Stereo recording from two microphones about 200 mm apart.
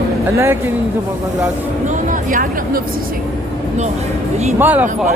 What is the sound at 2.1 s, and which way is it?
Speech, 40° right (ahead or behind).